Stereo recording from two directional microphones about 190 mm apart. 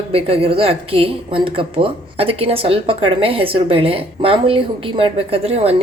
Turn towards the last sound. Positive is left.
turn(degrees=-30)  # may be behind; listen again after turning